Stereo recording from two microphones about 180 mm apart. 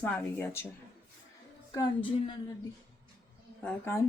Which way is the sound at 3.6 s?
15° left (ahead or behind).